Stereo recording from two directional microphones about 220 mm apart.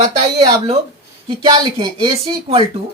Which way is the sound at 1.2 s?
20° right (ahead or behind).